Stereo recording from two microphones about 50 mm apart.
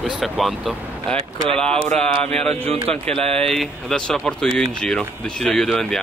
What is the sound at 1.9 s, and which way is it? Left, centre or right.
Speech, centre.